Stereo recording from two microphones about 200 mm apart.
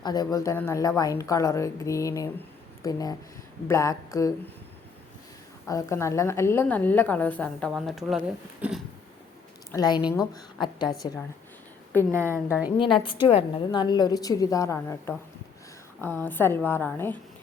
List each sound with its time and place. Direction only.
0.0 s a woman's voice: 20° left (ahead or behind)
5.6 s a woman's voice: 15° left (ahead or behind); by 8.2 s centre (ahead or behind)
8.6 s a sound: 10° right (ahead or behind)
9.7 s a woman's voice: 20° left (ahead or behind)
10.0 s speech: 5° right (ahead or behind)
10.3 s a woman's voice: 20° left (ahead or behind)
12.1 s speech: 10° right (ahead or behind)
12.8 s a woman's voice: 25° left (ahead or behind)